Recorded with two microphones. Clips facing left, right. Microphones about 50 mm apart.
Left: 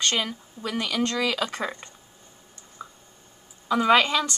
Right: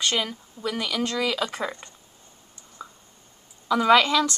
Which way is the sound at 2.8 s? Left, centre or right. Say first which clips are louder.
Even; centre.